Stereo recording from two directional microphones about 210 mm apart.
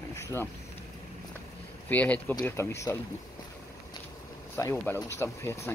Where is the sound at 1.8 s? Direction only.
5° left (ahead or behind).